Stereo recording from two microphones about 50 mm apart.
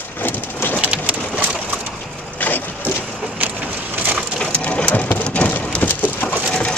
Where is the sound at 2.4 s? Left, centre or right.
Left.